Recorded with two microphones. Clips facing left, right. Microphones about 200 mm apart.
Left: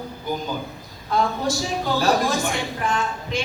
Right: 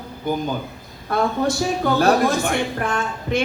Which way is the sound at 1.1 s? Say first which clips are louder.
Right 2 dB; 60° right (ahead or behind).